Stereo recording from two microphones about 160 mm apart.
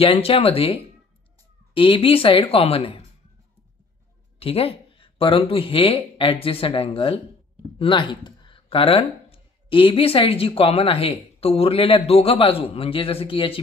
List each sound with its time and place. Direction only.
0.0 s speech: 40° left (ahead or behind)
4.4 s speech: 35° left (ahead or behind)